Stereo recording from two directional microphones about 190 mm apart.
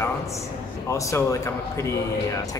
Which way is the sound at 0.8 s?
15° left (ahead or behind).